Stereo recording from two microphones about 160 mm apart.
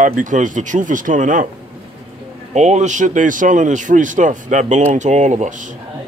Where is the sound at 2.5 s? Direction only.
45° right (ahead or behind).